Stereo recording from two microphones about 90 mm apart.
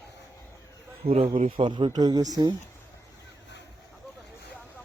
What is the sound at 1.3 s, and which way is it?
Speech, 75° right (ahead or behind).